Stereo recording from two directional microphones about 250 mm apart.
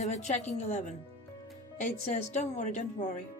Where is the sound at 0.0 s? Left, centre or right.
Left.